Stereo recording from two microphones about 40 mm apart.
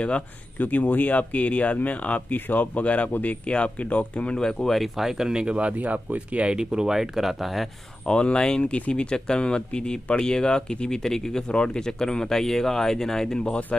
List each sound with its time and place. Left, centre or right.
0.6 s speech: left
3.4 s speech: left
4.4 s speech: centre
4.9 s speech: centre
5.3 s speech: right; by 7.6 s centre
8.1 s speech: left
8.7 s speech: left